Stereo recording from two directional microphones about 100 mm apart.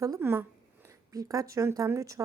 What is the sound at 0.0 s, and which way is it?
A woman's voice, 30° right (ahead or behind).